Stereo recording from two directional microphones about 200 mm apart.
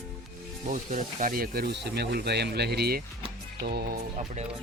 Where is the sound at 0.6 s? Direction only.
40° right (ahead or behind).